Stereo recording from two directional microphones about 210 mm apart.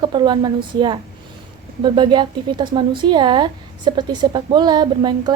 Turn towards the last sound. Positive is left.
turn(degrees=-20)  # may be behind; listen again after turning